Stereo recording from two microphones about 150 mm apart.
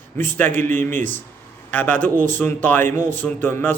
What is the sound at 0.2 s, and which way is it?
A man's voice, 15° left (ahead or behind).